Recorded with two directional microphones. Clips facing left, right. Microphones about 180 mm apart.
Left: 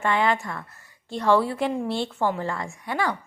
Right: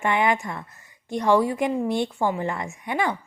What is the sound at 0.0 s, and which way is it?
A woman's voice, 15° right (ahead or behind).